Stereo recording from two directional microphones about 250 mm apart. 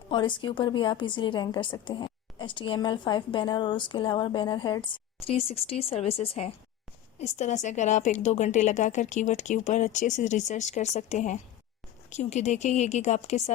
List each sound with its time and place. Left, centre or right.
0.1 s a woman's voice: centre